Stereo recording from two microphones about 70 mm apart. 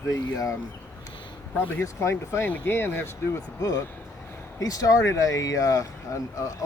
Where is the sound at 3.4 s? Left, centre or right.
Left.